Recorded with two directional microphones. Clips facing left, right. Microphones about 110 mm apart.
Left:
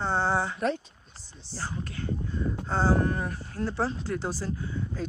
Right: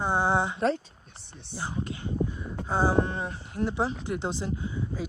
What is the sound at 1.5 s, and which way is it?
Speech, 20° right (ahead or behind).